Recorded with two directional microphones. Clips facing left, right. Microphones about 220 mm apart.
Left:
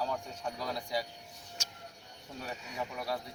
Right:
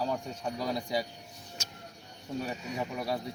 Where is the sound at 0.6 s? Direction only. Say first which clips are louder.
Right 4 dB; 15° right (ahead or behind).